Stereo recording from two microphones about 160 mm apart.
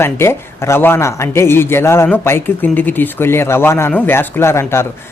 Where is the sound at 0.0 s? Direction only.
15° left (ahead or behind).